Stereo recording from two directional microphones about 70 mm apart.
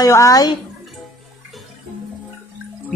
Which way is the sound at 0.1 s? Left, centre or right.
Left.